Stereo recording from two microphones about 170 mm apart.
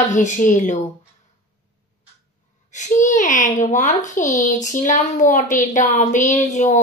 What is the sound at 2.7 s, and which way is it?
A woman's voice, 45° left (ahead or behind).